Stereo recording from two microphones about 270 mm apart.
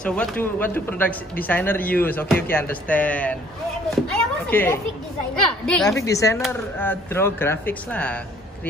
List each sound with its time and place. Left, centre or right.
0.0 s a man's voice: centre
4.5 s a man's voice: centre